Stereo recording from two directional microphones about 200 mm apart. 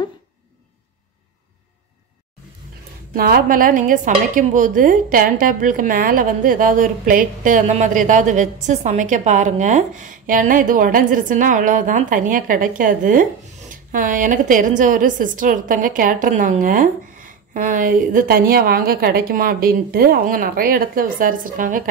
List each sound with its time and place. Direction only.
3.2 s a woman's voice: 50° right (ahead or behind)